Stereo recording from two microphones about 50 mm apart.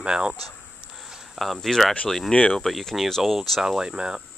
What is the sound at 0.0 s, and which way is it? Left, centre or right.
Speech, centre.